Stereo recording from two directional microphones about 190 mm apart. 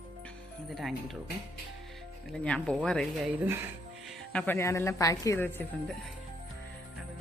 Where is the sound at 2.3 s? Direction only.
5° left (ahead or behind).